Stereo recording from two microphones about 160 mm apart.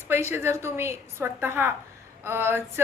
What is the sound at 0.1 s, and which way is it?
A woman's voice, 15° right (ahead or behind).